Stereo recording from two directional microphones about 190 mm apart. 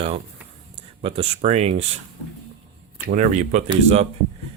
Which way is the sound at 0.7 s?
30° right (ahead or behind).